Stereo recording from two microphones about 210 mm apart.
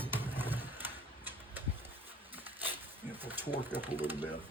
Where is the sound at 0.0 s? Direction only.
10° right (ahead or behind).